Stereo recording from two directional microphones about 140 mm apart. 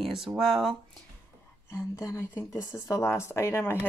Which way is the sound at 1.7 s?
20° left (ahead or behind).